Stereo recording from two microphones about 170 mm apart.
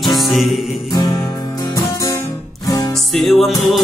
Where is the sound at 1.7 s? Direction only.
20° left (ahead or behind).